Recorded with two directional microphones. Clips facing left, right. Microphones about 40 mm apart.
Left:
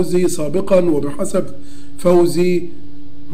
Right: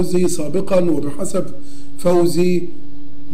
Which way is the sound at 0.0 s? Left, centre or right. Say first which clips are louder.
Left 2 dB; left.